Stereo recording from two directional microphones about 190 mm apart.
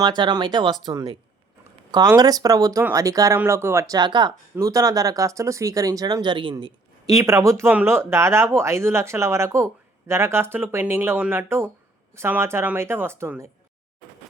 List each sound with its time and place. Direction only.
0.0 s speech: 20° right (ahead or behind)